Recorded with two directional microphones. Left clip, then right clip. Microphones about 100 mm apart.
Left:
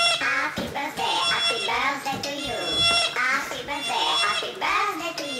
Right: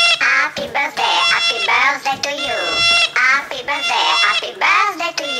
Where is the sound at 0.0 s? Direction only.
10° right (ahead or behind).